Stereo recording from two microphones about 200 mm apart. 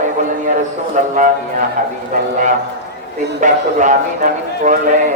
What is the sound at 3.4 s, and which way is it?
A man's voice, 40° right (ahead or behind).